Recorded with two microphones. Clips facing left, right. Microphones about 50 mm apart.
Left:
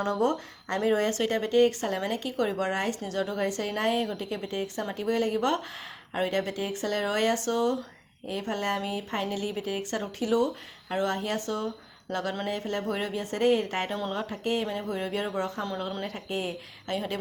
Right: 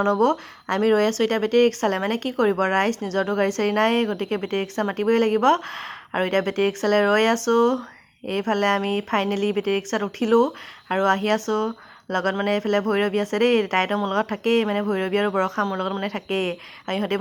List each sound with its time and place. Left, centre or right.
0.1 s speech: right
2.4 s speech: right